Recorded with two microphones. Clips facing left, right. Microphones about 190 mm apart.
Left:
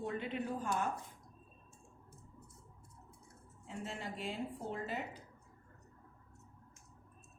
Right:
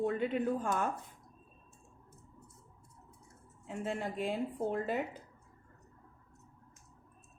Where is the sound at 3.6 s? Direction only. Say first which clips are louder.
Right 7 dB; 50° right (ahead or behind).